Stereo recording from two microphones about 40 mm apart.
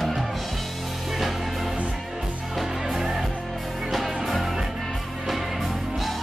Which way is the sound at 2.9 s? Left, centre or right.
Centre.